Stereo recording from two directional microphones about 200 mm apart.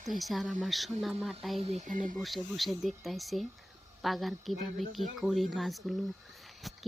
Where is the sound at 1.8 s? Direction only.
40° right (ahead or behind).